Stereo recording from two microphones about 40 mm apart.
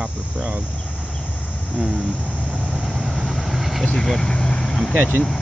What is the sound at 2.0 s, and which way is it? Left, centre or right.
Vehicle, right.